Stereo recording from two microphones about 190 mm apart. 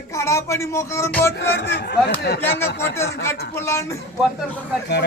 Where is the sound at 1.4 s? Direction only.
60° left (ahead or behind).